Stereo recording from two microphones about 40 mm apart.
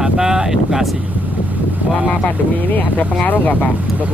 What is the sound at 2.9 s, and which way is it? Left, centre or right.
Speech, left.